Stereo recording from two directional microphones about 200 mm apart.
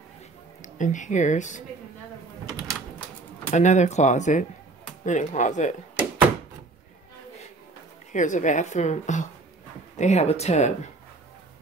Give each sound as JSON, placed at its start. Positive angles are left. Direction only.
{"t": 0.6, "sound": "speech", "side_deg": 40}
{"t": 3.4, "sound": "a woman's voice", "side_deg": 35}
{"t": 8.1, "sound": "a woman's voice", "side_deg": 40}